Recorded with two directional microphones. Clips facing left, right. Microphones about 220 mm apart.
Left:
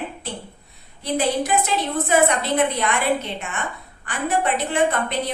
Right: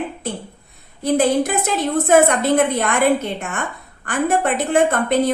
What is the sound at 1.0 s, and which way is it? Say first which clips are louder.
A woman's voice: right 6 dB; 50° right (ahead or behind).